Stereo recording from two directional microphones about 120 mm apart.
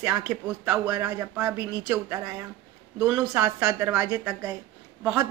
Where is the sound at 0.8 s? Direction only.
25° right (ahead or behind).